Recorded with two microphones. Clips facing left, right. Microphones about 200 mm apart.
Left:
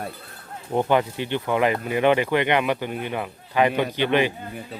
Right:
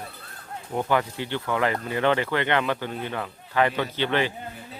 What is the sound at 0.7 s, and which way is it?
Speech, 20° left (ahead or behind).